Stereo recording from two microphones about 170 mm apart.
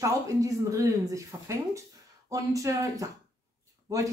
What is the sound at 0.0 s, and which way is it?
Speech, 20° right (ahead or behind).